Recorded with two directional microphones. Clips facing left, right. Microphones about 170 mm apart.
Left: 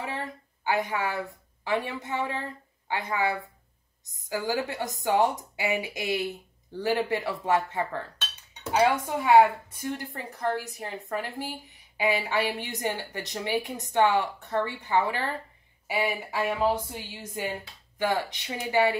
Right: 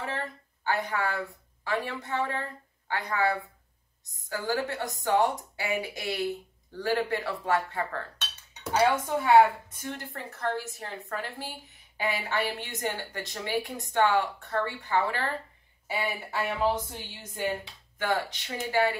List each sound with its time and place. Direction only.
0.7 s a woman's voice: 20° left (ahead or behind)